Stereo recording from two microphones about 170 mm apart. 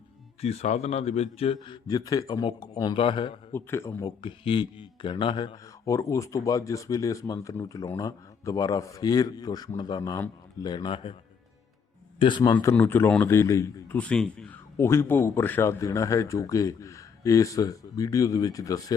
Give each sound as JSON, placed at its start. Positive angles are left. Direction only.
{"t": 0.4, "sound": "speech", "side_deg": 40}
{"t": 3.5, "sound": "speech", "side_deg": 15}
{"t": 4.0, "sound": "speech", "side_deg": 30}
{"t": 12.2, "sound": "speech", "side_deg": 25}
{"t": 12.5, "sound": "speech", "side_deg": 10}